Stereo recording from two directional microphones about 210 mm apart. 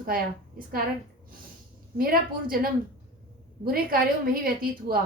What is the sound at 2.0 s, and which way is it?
A woman's voice, 45° right (ahead or behind).